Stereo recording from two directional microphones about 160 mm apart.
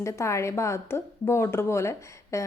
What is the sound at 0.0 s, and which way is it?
A woman's voice, 20° left (ahead or behind).